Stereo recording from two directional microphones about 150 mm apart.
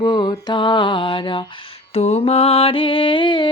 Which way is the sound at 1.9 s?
45° left (ahead or behind).